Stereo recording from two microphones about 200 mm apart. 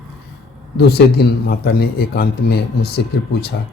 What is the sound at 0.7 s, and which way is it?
Speech, 55° left (ahead or behind).